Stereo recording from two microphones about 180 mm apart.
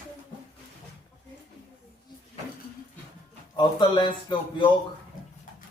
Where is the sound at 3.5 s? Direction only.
25° left (ahead or behind).